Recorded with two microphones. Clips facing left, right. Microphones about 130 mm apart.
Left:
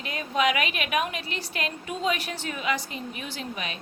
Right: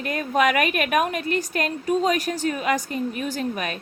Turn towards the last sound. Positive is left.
turn(degrees=-50)  # may be behind; listen again after turning